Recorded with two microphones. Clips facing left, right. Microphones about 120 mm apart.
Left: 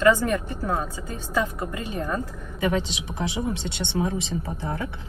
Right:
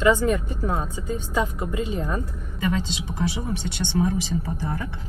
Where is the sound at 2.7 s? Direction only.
20° left (ahead or behind).